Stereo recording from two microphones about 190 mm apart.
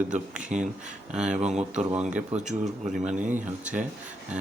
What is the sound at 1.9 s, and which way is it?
Speech, 5° right (ahead or behind).